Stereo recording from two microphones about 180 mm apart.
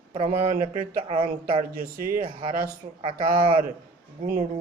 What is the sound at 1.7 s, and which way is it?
Speech, 50° right (ahead or behind).